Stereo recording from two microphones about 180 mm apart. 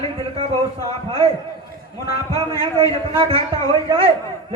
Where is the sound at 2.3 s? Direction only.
20° left (ahead or behind).